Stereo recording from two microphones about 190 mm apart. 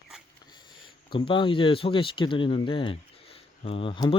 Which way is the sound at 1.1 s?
25° left (ahead or behind).